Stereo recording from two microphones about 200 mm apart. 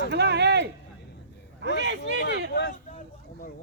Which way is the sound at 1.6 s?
65° right (ahead or behind).